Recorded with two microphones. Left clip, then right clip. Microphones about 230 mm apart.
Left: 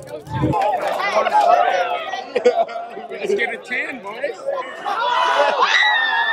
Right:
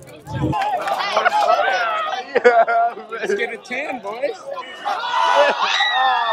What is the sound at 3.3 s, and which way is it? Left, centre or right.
A man's voice, centre.